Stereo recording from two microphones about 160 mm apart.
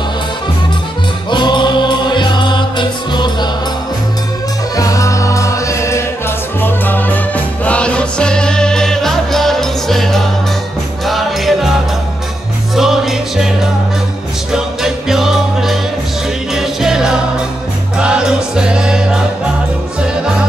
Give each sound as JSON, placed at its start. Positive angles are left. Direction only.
{"t": 1.3, "sound": "music", "side_deg": 30}
{"t": 4.7, "sound": "music", "side_deg": 20}
{"t": 12.7, "sound": "music", "side_deg": 0}
{"t": 14.5, "sound": "music", "side_deg": -5}